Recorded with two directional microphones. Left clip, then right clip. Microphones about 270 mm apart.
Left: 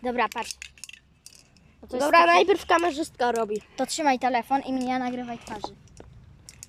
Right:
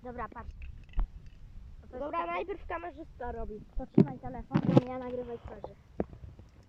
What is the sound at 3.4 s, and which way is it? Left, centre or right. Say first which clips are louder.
Speech: left 16 dB; left.